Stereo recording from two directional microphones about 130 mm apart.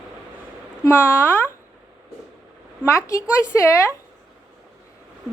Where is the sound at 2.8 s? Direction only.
25° left (ahead or behind).